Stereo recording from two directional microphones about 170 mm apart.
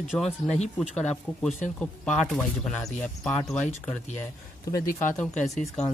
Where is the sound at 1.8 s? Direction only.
5° left (ahead or behind).